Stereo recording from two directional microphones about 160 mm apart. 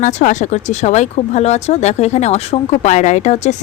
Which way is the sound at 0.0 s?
50° left (ahead or behind).